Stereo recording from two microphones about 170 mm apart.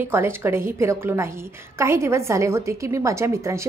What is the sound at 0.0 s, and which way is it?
A woman's voice, 15° right (ahead or behind).